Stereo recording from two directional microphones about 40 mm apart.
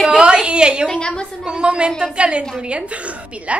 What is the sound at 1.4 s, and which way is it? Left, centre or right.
A woman's voice, right.